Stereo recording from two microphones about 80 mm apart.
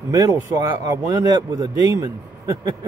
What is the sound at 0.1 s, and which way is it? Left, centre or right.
Speech, right.